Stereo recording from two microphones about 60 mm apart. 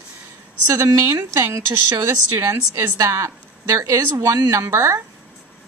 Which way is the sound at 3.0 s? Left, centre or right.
Right.